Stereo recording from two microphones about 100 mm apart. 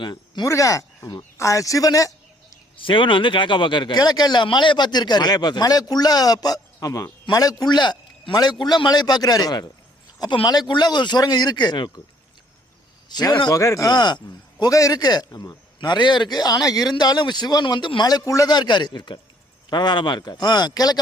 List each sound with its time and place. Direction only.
0.0 s speech: 45° left (ahead or behind)
0.4 s speech: 35° left (ahead or behind)
2.7 s speech: 55° left (ahead or behind)
13.1 s speech: 45° left (ahead or behind)
13.9 s speech: 45° left (ahead or behind)
14.6 s speech: 35° left (ahead or behind)